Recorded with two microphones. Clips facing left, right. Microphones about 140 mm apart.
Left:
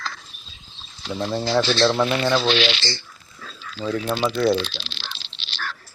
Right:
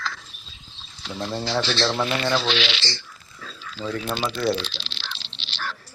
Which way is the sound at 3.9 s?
5° left (ahead or behind).